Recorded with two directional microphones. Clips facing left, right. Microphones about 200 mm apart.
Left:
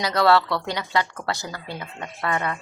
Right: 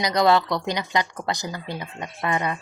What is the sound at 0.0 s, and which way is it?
A woman's voice, 15° right (ahead or behind).